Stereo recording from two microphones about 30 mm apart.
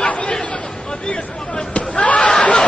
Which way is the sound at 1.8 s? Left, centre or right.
Left.